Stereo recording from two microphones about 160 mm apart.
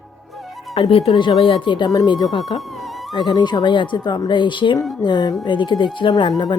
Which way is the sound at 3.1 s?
25° left (ahead or behind).